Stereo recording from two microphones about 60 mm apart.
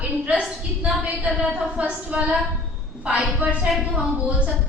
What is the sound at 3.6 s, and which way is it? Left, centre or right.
Speech, centre.